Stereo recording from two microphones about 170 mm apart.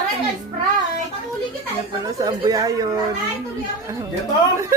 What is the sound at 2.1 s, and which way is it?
Speech, 20° right (ahead or behind).